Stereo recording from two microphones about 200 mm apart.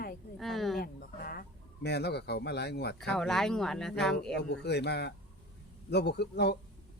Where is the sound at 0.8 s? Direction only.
50° left (ahead or behind).